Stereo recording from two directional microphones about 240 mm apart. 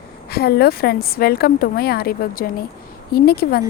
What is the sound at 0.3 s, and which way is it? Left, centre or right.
A woman's voice, left.